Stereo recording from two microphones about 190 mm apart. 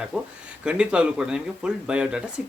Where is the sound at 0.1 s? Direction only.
5° left (ahead or behind).